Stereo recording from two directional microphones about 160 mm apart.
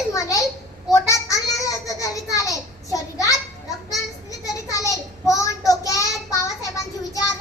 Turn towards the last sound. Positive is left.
turn(degrees=20)  # may be behind; listen again after turning